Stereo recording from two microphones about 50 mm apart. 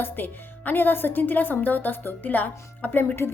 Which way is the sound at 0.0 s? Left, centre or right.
Left.